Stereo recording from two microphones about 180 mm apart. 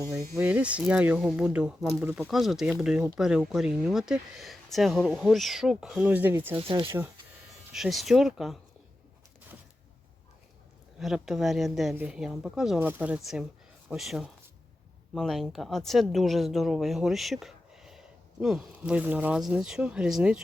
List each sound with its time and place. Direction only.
0.3 s speech: 10° right (ahead or behind)
6.6 s speech: 30° right (ahead or behind)
7.7 s speech: centre (ahead or behind)
11.0 s speech: centre (ahead or behind)